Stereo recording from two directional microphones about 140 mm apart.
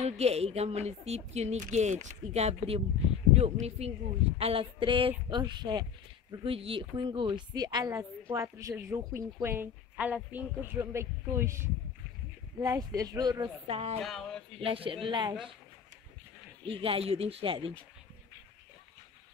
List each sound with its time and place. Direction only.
0.0 s speech: 50° right (ahead or behind); by 5.9 s 30° right (ahead or behind)
6.4 s a woman's voice: 40° right (ahead or behind)
13.7 s speech: 45° right (ahead or behind)
14.0 s a sound: 5° left (ahead or behind)
14.6 s speech: 40° right (ahead or behind)
16.6 s speech: 40° right (ahead or behind)